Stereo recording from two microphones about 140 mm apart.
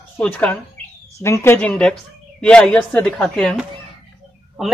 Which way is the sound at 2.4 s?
5° left (ahead or behind).